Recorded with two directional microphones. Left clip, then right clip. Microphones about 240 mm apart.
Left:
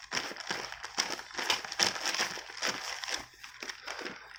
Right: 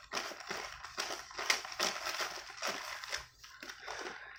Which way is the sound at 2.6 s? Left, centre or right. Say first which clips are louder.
Left 5 dB; left.